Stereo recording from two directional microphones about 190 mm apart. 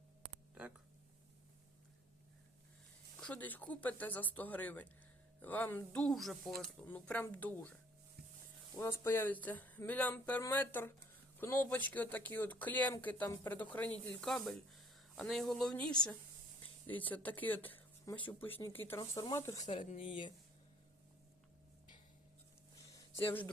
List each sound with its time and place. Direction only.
3.2 s speech: 5° left (ahead or behind)
17.0 s speech: 10° left (ahead or behind)
19.6 s speech: 35° left (ahead or behind)
22.9 s a sound: 15° left (ahead or behind)